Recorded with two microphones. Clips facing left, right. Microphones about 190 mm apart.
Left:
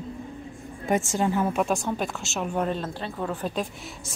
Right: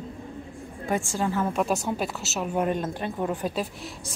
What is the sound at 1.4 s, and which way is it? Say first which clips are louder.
Speech: left 1 dB; centre (ahead or behind).